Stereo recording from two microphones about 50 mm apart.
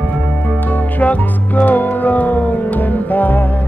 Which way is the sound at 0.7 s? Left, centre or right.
Left.